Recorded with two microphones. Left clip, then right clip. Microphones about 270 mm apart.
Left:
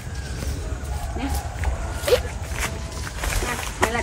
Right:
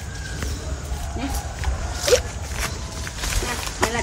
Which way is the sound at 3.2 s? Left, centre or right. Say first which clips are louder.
Even; centre.